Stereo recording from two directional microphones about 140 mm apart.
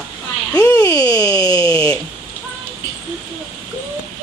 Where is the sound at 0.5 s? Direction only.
25° left (ahead or behind).